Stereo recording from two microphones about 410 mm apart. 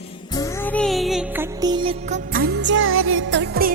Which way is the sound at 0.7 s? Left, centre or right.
Centre.